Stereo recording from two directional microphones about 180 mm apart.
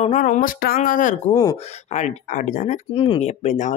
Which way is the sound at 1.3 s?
20° left (ahead or behind).